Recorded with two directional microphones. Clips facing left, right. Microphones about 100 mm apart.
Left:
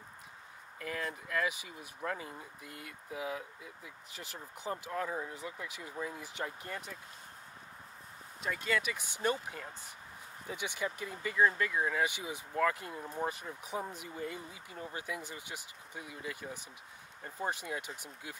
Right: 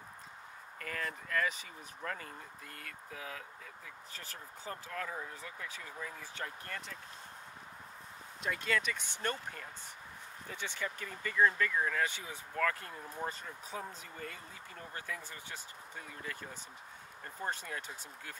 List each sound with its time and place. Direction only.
0.7 s speech: 10° left (ahead or behind)
8.4 s speech: centre (ahead or behind)